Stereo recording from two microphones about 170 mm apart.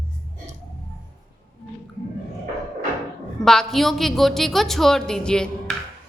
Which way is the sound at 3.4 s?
5° left (ahead or behind).